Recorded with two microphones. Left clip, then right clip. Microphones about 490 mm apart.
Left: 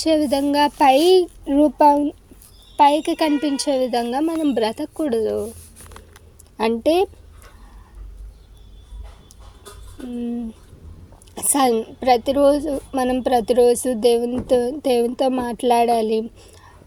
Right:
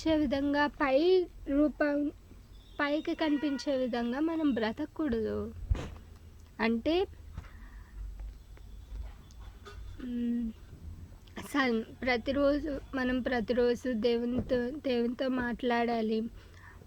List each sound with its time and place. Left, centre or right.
0.0 s a woman's voice: right
6.6 s a woman's voice: right
10.1 s a woman's voice: right
11.3 s a woman's voice: right